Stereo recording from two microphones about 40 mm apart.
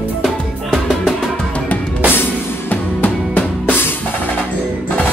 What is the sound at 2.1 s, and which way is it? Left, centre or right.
Music, left.